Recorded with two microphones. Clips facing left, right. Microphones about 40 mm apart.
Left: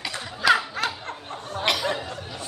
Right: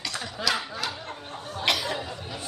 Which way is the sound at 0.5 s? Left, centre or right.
Left.